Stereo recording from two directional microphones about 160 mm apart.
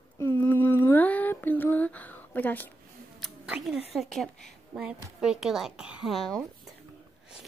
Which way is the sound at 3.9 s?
Centre (ahead or behind).